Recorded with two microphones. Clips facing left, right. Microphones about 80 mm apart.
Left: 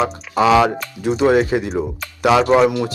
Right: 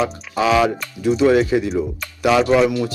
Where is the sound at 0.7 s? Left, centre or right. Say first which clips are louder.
Right 1 dB; left.